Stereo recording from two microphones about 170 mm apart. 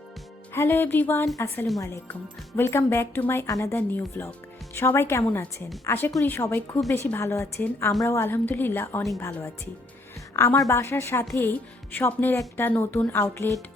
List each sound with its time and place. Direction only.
0.5 s a woman's voice: 15° left (ahead or behind)